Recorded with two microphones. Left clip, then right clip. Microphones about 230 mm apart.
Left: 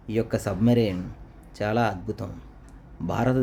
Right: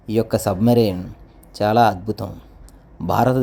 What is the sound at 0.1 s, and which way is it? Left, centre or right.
A man's voice, centre.